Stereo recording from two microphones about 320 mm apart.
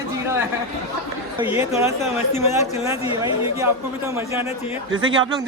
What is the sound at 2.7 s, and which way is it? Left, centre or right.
Speech, centre.